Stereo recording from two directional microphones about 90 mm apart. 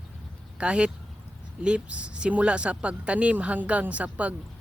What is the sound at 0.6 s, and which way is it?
A woman's voice, 10° right (ahead or behind).